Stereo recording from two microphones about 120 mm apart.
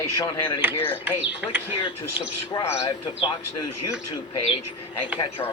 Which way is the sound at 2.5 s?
25° left (ahead or behind).